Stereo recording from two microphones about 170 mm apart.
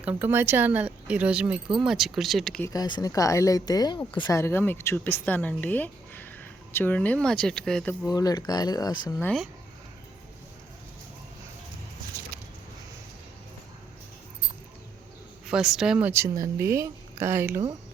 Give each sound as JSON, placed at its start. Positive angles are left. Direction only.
{"t": 0.0, "sound": "speech", "side_deg": -10}
{"t": 2.6, "sound": "speech", "side_deg": 25}
{"t": 4.4, "sound": "speech", "side_deg": 15}
{"t": 8.0, "sound": "speech", "side_deg": 20}
{"t": 9.1, "sound": "speech", "side_deg": 5}
{"t": 15.4, "sound": "speech", "side_deg": -5}